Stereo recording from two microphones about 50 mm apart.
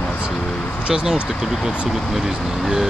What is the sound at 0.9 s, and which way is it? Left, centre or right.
Speech, centre.